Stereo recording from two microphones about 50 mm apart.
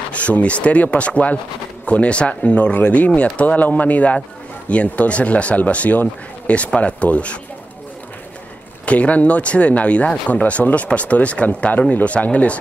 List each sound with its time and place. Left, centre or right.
0.1 s speech: left
8.8 s speech: left